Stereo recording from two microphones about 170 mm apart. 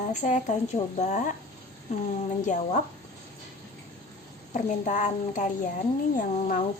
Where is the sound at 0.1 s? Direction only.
45° left (ahead or behind).